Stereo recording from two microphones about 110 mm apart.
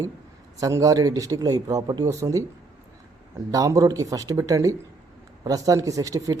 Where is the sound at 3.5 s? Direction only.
30° right (ahead or behind).